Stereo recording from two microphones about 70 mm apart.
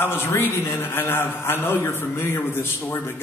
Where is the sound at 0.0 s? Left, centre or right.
Left.